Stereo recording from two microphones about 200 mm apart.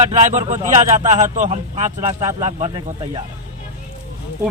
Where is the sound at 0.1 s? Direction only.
35° right (ahead or behind).